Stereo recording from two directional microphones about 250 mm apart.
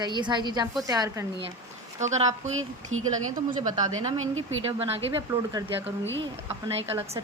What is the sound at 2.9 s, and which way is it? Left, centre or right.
Speech, right.